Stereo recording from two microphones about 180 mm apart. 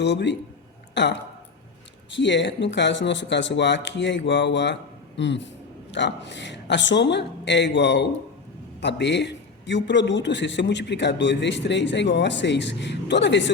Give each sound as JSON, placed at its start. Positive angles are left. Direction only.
{"t": 0.0, "sound": "a man's voice", "side_deg": 75}